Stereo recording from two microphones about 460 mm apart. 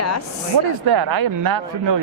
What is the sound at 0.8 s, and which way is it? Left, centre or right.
Speech, right.